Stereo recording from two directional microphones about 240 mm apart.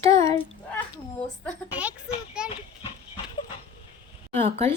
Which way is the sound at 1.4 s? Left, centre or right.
Centre.